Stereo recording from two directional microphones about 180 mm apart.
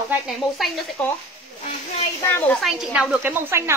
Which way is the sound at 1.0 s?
10° left (ahead or behind).